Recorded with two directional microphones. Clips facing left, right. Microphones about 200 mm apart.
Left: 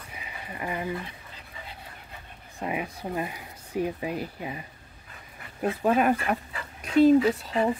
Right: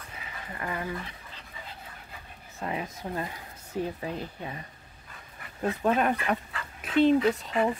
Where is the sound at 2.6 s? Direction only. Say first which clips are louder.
Left 2 dB; 15° left (ahead or behind).